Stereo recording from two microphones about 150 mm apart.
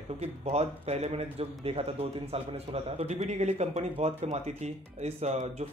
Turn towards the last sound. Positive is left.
turn(degrees=-45)  # may be behind; listen again after turning